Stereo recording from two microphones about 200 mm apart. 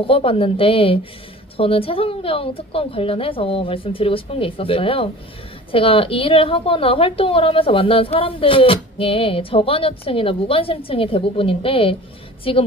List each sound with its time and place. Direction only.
0.0 s a woman's voice: 30° left (ahead or behind)